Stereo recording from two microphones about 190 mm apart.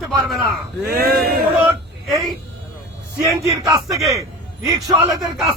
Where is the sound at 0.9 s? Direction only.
55° right (ahead or behind).